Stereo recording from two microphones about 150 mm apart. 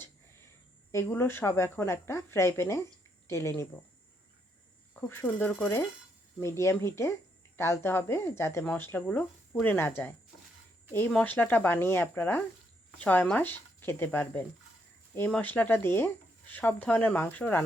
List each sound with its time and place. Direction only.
0.9 s speech: 20° left (ahead or behind)
4.9 s speech: 15° left (ahead or behind)